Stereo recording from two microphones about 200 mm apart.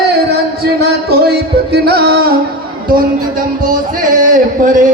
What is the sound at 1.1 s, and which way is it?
Music, 55° right (ahead or behind).